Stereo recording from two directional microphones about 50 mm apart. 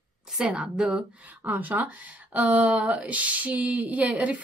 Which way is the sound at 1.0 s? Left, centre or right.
Right.